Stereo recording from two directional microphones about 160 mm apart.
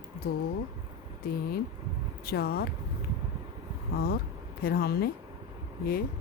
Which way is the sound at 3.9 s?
70° left (ahead or behind).